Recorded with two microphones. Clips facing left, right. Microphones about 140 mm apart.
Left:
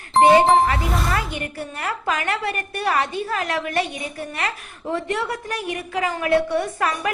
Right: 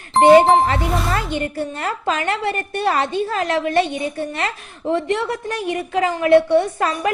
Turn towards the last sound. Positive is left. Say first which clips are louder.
# right 4 dB
turn(degrees=-25)  # may be behind; listen again after turning